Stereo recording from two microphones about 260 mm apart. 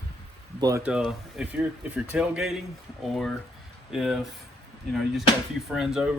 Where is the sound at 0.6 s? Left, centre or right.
Centre.